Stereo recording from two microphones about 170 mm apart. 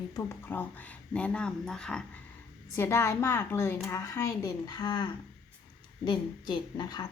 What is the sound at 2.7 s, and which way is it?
A woman's voice, 15° left (ahead or behind).